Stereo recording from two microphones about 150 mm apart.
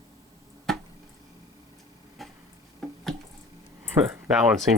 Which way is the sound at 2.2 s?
Centre (ahead or behind).